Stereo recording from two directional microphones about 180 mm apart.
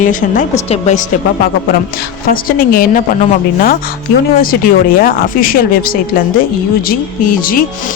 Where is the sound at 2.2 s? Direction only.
55° left (ahead or behind).